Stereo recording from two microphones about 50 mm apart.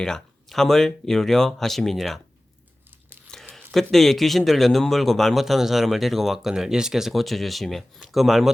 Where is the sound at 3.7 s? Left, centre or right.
Centre.